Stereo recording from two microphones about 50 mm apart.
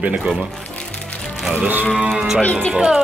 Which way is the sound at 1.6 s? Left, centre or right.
Right.